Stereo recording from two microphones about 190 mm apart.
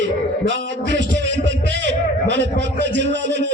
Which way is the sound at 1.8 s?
70° right (ahead or behind).